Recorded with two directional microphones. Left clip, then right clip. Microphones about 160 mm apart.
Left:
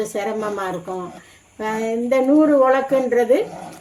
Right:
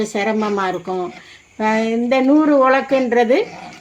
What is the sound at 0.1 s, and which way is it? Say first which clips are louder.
Speech: right 4 dB; 50° right (ahead or behind).